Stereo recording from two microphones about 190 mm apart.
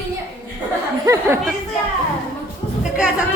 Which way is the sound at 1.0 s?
15° right (ahead or behind).